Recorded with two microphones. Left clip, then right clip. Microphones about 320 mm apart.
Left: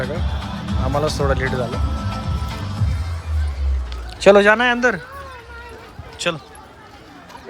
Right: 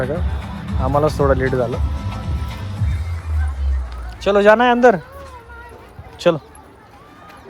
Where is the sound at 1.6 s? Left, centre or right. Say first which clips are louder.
Right 1 dB; centre.